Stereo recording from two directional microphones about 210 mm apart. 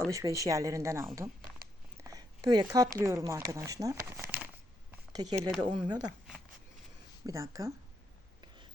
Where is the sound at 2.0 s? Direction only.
15° right (ahead or behind).